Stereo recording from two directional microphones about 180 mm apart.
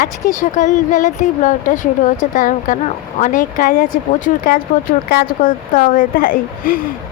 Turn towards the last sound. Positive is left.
turn(degrees=50)  # may be behind; listen again after turning